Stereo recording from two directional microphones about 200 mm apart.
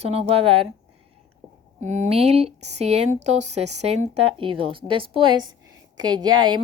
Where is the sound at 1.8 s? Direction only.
35° right (ahead or behind).